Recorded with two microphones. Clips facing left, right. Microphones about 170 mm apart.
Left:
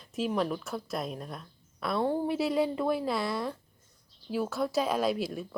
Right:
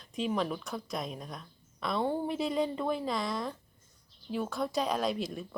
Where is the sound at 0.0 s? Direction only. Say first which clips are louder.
Left 2 dB; 5° left (ahead or behind).